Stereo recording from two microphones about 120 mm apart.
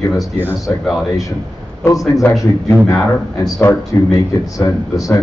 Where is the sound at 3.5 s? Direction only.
20° left (ahead or behind).